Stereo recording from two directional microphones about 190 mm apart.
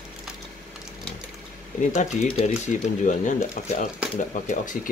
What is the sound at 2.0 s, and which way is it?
Speech, 40° left (ahead or behind).